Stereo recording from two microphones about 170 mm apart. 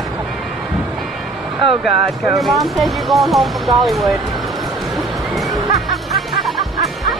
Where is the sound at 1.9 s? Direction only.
20° right (ahead or behind).